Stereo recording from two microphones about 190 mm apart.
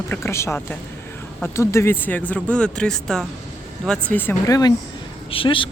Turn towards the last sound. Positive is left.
turn(degrees=25)  # may be behind; listen again after turning